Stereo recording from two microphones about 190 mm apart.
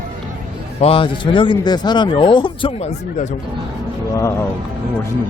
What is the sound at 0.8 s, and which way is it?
Speech, 30° left (ahead or behind).